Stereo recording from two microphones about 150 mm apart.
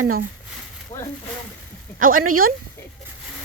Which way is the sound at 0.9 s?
40° left (ahead or behind).